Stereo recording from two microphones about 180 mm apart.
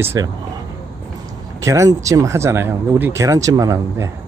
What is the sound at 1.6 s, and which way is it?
Speech, 20° right (ahead or behind).